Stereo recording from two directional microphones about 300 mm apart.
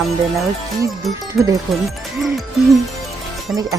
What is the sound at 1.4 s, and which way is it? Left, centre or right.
Speech, centre.